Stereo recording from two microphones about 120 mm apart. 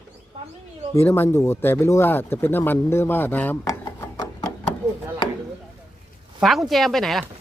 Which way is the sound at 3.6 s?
25° left (ahead or behind).